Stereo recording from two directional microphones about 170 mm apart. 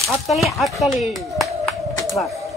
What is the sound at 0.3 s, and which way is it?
Speech, centre (ahead or behind).